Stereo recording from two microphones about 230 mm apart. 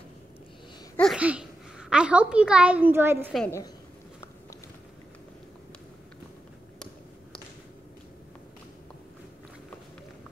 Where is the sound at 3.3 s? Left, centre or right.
Centre.